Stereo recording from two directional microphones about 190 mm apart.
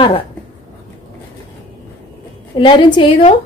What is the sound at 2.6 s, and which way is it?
Speech, 25° left (ahead or behind).